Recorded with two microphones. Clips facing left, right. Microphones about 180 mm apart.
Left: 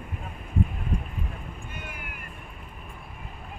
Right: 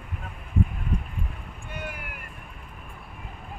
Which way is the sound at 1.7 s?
70° right (ahead or behind).